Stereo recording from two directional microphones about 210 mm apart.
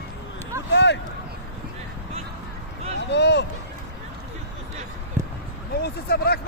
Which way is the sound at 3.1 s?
55° left (ahead or behind).